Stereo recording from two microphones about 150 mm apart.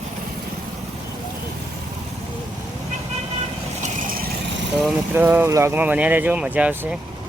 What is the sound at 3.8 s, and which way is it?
Vehicle, 75° right (ahead or behind).